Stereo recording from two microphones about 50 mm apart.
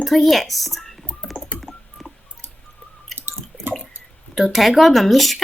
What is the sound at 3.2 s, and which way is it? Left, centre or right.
Drip, right.